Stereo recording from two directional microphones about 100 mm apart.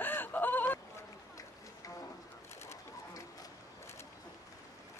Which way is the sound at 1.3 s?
35° left (ahead or behind).